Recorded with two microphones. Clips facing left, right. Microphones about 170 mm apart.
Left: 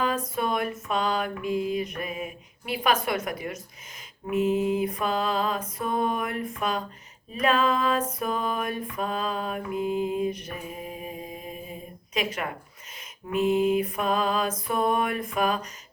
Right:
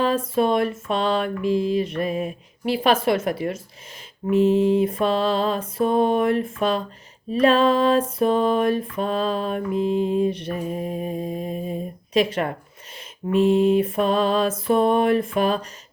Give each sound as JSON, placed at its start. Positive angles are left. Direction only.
{"t": 0.0, "sound": "mantra", "side_deg": -30}